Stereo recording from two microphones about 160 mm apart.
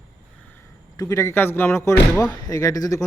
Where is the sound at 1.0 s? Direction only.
20° left (ahead or behind).